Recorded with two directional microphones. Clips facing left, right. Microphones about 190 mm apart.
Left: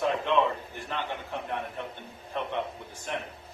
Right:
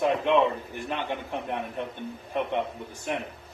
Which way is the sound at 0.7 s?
15° right (ahead or behind).